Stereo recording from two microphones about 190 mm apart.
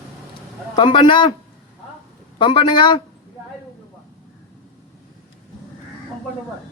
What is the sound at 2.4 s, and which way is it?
Speech, 25° left (ahead or behind).